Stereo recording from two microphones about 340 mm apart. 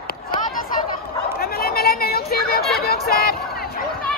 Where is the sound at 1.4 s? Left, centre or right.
Left.